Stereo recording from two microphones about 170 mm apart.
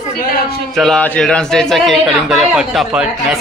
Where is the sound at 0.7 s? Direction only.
5° left (ahead or behind).